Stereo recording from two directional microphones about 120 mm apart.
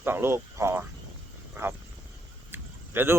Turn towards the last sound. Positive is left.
turn(degrees=-20)  # may be behind; listen again after turning